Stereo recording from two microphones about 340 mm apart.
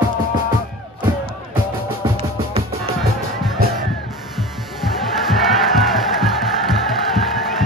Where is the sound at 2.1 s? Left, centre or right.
Centre.